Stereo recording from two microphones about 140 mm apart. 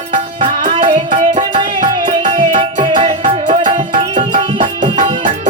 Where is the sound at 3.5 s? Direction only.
65° right (ahead or behind).